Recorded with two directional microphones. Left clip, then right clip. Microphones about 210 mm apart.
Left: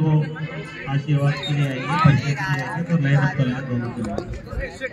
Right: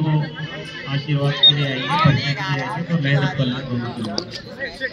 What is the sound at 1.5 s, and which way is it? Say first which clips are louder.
Speech: right 8 dB; 40° left (ahead or behind).